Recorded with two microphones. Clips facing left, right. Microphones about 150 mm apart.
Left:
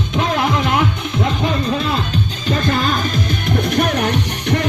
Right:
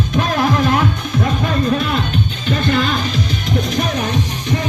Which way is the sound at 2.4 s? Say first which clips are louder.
Right 1 dB; 40° left (ahead or behind).